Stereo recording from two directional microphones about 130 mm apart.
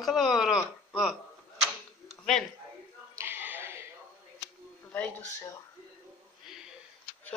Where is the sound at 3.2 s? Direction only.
15° right (ahead or behind).